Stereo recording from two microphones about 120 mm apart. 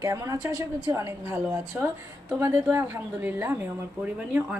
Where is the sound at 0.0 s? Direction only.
25° right (ahead or behind).